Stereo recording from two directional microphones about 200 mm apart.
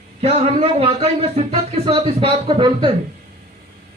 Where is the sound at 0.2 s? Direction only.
35° right (ahead or behind).